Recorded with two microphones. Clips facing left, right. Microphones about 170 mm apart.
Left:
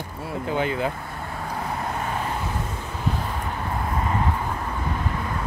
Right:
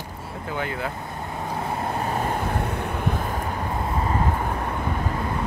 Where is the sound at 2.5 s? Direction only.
60° right (ahead or behind).